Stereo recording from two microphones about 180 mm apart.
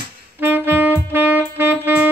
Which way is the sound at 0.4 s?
10° right (ahead or behind).